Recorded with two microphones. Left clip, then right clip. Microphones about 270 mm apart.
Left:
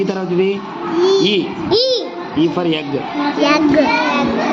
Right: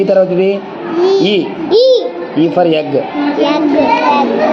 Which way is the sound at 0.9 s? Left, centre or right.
Centre.